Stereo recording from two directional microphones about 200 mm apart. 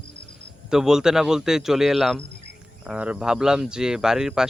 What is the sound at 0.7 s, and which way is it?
Speech, 5° right (ahead or behind).